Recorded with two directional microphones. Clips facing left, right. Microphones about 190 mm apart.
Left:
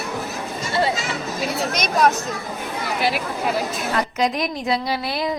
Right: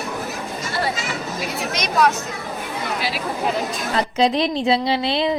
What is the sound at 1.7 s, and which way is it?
Speech, 45° left (ahead or behind).